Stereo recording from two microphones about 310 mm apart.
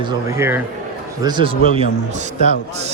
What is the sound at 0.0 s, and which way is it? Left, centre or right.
A man's voice, centre.